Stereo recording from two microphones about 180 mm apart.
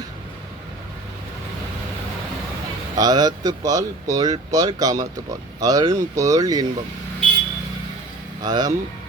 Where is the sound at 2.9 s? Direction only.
20° right (ahead or behind).